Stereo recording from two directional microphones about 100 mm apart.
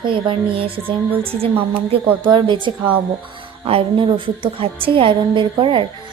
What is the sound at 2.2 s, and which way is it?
Speech, 55° right (ahead or behind).